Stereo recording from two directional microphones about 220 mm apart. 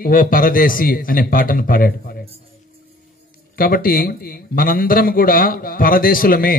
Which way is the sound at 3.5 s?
40° left (ahead or behind).